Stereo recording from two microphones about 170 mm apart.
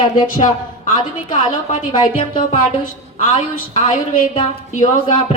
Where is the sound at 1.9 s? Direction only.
30° left (ahead or behind).